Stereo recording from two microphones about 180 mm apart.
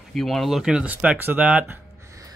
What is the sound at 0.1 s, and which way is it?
Speech, centre (ahead or behind).